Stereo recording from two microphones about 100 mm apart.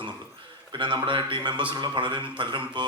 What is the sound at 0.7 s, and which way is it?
A man's voice, 50° right (ahead or behind).